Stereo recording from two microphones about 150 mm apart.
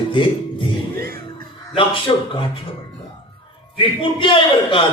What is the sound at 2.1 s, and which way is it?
Music, 35° left (ahead or behind).